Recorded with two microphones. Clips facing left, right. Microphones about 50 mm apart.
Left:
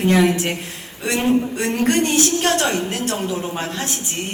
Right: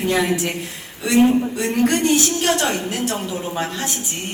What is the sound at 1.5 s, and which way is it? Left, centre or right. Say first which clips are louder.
Speech: even; left.